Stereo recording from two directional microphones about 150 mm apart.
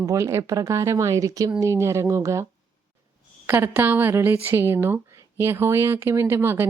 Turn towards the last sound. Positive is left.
turn(degrees=-15)  # may be behind; listen again after turning